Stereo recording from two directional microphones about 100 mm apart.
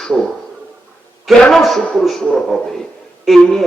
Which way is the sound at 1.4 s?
5° left (ahead or behind).